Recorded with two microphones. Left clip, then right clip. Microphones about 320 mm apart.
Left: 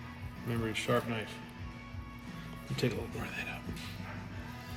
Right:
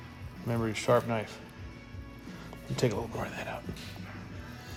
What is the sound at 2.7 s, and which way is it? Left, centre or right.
Speech, centre.